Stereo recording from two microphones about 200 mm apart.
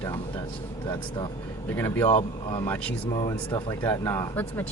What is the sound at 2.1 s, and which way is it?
Speech, 30° left (ahead or behind).